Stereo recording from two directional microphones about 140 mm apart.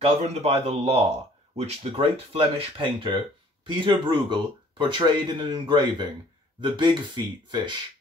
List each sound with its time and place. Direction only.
0.0 s speech: 45° right (ahead or behind)